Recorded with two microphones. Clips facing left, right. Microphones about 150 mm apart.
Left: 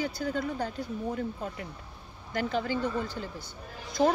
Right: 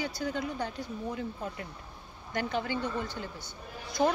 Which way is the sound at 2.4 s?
40° left (ahead or behind).